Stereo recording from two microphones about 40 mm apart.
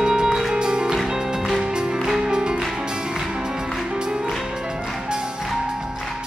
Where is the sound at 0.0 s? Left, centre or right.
Centre.